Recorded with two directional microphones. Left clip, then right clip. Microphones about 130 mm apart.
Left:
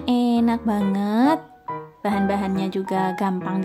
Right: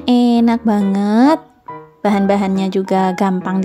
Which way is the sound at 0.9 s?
55° right (ahead or behind).